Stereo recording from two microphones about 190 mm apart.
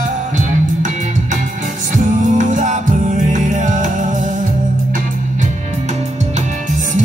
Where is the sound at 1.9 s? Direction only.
40° right (ahead or behind).